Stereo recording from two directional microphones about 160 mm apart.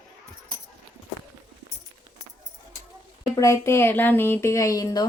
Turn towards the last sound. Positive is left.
turn(degrees=20)  # may be behind; listen again after turning